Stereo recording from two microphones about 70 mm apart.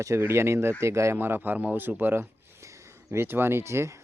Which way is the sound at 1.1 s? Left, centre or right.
Right.